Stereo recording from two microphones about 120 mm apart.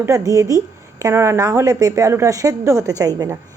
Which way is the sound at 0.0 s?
25° right (ahead or behind).